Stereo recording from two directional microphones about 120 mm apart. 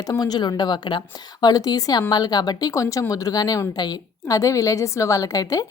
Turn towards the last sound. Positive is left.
turn(degrees=30)  # may be behind; listen again after turning